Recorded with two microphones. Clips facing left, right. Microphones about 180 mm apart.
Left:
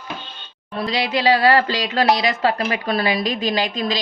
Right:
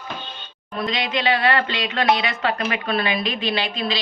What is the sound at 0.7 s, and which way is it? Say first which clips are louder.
Speech: left 2 dB; 35° left (ahead or behind).